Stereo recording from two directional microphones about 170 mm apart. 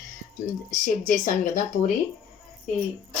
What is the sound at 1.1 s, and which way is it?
Speech, 50° left (ahead or behind).